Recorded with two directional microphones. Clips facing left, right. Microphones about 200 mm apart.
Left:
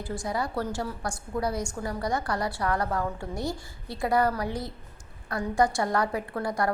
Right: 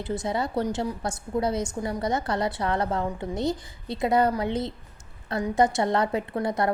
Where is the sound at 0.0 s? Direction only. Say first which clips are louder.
Right 3 dB; 20° right (ahead or behind).